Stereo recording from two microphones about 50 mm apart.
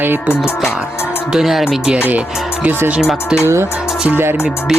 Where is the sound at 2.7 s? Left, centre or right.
Right.